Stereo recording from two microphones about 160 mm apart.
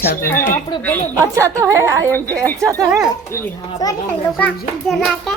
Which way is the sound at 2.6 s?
20° right (ahead or behind).